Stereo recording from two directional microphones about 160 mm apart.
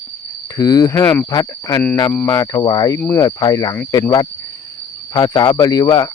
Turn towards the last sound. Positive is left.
turn(degrees=25)  # may be behind; listen again after turning